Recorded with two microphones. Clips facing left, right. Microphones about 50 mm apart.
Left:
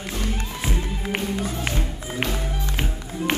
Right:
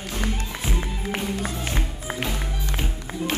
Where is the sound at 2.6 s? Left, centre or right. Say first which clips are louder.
Left 1 dB; left.